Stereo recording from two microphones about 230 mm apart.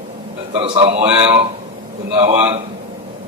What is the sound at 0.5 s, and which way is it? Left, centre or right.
Speech, right.